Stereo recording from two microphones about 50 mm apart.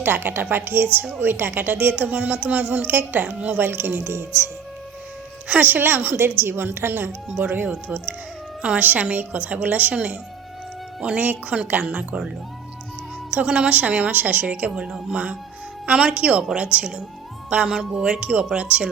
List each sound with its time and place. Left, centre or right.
0.0 s a woman's voice: right
3.6 s speech: right
5.5 s a woman's voice: right
11.2 s a woman's voice: right
13.3 s a woman's voice: right